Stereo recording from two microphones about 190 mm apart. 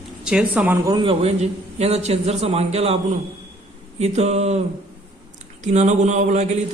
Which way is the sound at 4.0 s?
35° right (ahead or behind).